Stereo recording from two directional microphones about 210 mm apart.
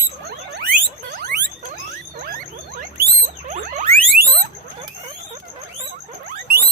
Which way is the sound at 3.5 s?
40° right (ahead or behind).